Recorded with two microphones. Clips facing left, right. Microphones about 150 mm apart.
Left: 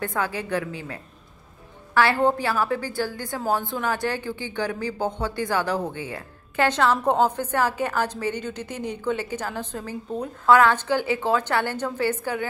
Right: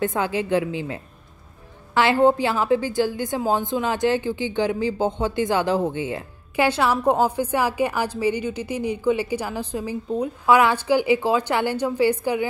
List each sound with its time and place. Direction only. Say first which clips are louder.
0.0 s a woman's voice: right 4 dB; 20° right (ahead or behind)
6.5 s a woman's voice: right 1 dB; 10° right (ahead or behind)